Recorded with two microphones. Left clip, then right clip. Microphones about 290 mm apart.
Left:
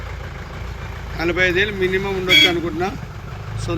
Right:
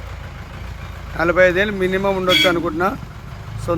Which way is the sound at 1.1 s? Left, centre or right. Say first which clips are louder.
Right 4 dB; centre.